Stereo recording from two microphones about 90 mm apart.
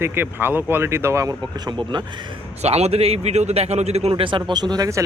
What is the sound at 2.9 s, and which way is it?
Speech, 90° right.